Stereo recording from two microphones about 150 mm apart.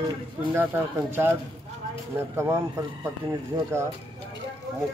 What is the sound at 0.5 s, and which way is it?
Speech, 15° right (ahead or behind).